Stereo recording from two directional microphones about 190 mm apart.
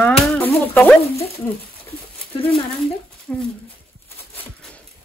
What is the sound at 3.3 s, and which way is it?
Dog, 5° left (ahead or behind).